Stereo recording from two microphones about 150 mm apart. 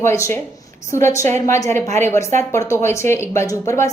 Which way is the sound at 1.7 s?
50° right (ahead or behind).